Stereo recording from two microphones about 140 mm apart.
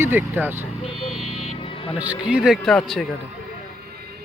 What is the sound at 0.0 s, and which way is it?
Speech, 15° right (ahead or behind).